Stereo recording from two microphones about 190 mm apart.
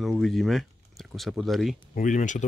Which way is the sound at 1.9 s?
40° left (ahead or behind).